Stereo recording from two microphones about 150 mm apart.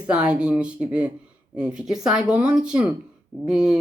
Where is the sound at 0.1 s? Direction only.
5° right (ahead or behind).